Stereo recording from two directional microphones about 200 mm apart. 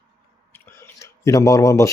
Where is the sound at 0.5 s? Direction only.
10° left (ahead or behind).